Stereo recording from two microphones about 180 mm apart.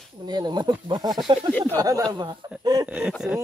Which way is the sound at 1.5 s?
10° left (ahead or behind).